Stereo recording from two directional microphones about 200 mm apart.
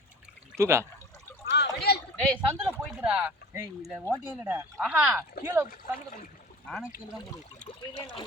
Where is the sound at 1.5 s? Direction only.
55° left (ahead or behind).